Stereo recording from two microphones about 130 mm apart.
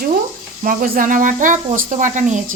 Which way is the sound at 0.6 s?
90° right.